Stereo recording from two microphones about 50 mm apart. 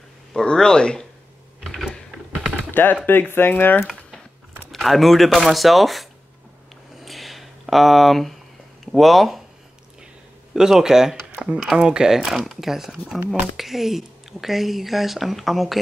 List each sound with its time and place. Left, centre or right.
0.3 s speech: centre
2.7 s speech: left
4.6 s speech: centre
7.0 s a sound: centre
8.8 s speech: centre
10.5 s speech: centre